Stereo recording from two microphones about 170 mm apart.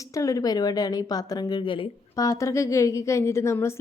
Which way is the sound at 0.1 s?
20° left (ahead or behind).